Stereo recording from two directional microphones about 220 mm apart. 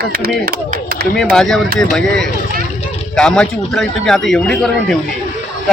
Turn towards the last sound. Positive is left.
turn(degrees=0)  # may be behind; listen again after turning